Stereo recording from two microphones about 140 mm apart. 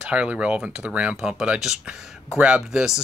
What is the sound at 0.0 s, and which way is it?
Speech, 10° right (ahead or behind).